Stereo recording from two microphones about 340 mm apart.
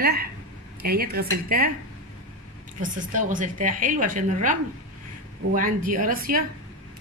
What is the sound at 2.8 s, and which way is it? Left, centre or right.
Speech, right.